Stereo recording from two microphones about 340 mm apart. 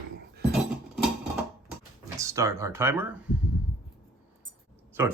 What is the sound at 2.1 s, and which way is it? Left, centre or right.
Speech, centre.